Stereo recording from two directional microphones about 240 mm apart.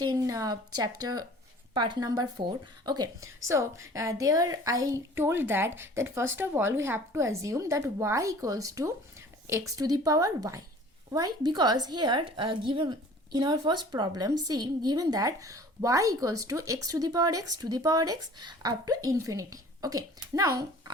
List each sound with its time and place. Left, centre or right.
0.0 s a woman's voice: centre